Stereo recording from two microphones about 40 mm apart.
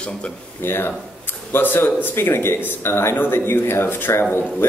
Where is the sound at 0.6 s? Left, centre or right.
Left.